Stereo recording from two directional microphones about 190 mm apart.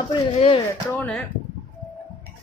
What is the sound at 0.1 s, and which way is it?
Speech, 30° left (ahead or behind).